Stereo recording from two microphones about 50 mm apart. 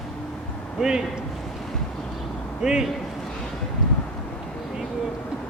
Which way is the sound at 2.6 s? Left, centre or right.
Centre.